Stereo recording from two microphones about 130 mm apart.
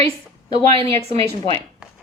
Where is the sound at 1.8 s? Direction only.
10° right (ahead or behind).